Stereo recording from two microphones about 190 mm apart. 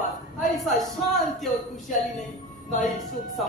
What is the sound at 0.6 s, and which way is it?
Speech, centre (ahead or behind).